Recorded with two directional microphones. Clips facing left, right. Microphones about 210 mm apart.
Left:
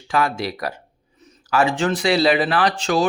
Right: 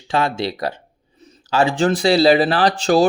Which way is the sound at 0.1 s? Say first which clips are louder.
Right 2 dB; 25° right (ahead or behind).